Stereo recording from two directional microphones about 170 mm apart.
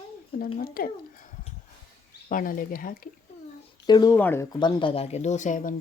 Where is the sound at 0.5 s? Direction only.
60° left (ahead or behind).